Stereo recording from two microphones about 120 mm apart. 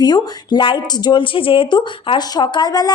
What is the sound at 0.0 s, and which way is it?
A woman's voice, 35° left (ahead or behind).